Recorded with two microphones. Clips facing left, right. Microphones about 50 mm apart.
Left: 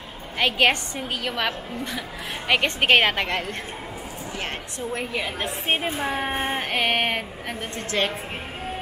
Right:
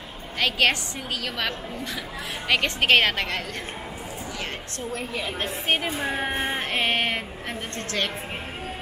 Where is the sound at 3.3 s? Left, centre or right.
Left.